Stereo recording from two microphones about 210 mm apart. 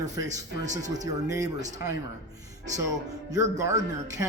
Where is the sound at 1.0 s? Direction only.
15° right (ahead or behind).